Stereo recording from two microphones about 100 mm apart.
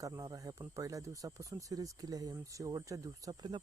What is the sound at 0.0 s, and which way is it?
Speech, 35° right (ahead or behind).